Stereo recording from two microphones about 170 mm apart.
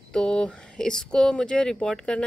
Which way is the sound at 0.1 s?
5° left (ahead or behind).